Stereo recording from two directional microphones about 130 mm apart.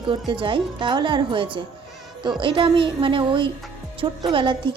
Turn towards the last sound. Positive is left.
turn(degrees=-40)  # may be behind; listen again after turning